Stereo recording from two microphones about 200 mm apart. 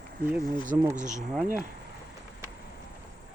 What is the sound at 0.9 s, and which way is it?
Speech, 35° right (ahead or behind).